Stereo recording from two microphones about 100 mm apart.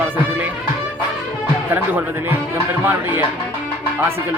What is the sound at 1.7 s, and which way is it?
Speech, 20° right (ahead or behind).